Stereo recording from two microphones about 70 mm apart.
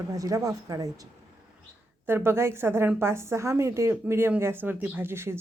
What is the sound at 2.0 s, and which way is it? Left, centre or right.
A woman's voice, right.